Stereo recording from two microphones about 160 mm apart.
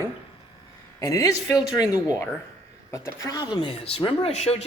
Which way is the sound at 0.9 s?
20° left (ahead or behind).